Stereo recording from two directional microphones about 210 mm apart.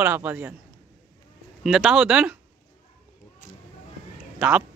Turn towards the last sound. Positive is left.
turn(degrees=-5)  # may be behind; listen again after turning